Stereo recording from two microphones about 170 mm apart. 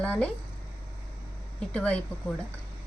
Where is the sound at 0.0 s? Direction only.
5° left (ahead or behind).